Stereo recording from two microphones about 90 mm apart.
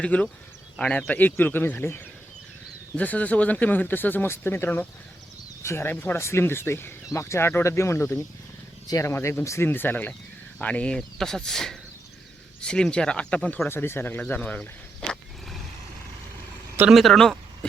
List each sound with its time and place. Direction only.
0.0 s speech: 15° left (ahead or behind)
13.7 s speech: 25° left (ahead or behind); by 15.5 s 5° left (ahead or behind)
16.9 s speech: centre (ahead or behind)